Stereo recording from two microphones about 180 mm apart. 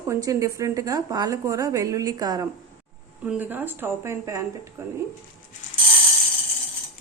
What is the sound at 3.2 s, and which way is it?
Speech, 10° right (ahead or behind).